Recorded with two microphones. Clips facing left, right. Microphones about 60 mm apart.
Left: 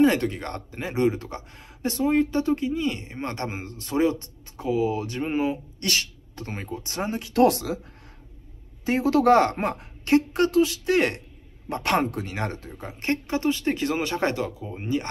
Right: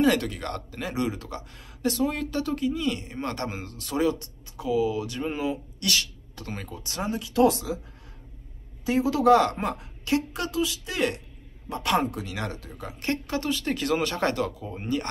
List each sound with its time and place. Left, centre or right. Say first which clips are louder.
0.0 s speech: left 3 dB; left
8.8 s a woman's voice: left 1 dB; left; by 15.0 s centre